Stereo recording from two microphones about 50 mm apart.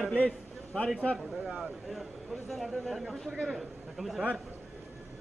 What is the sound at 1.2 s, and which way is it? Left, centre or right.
A man's voice, centre.